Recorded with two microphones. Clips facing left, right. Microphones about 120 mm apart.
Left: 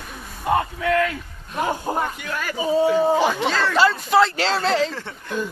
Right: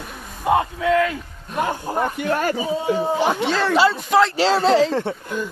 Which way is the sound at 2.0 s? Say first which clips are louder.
Right 5 dB; 40° right (ahead or behind).